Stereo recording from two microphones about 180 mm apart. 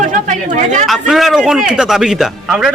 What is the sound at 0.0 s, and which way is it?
Speech, 45° right (ahead or behind).